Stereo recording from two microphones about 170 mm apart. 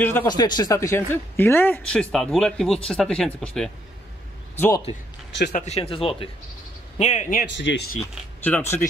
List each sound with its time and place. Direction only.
0.0 s speech: 10° left (ahead or behind)
0.3 s speech: 25° left (ahead or behind); by 3.7 s 5° left (ahead or behind)
4.6 s speech: 15° left (ahead or behind)
5.5 s speech: 40° left (ahead or behind)
7.0 s a man's voice: 45° left (ahead or behind)
7.5 s speech: 90° left
8.5 s speech: 10° left (ahead or behind)